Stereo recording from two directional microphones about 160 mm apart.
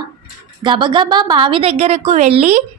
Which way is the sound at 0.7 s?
30° right (ahead or behind).